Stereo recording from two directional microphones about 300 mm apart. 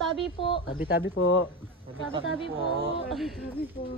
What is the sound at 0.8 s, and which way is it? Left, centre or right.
Speech, left.